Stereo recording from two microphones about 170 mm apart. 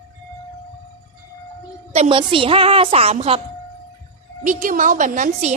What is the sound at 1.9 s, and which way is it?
A woman's voice, 35° right (ahead or behind).